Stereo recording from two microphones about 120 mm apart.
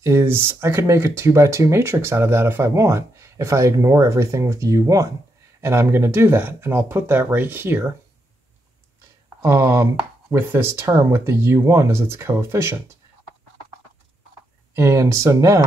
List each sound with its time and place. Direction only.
0.0 s speech: 20° right (ahead or behind)
9.4 s speech: 20° right (ahead or behind)
14.7 s speech: 25° right (ahead or behind)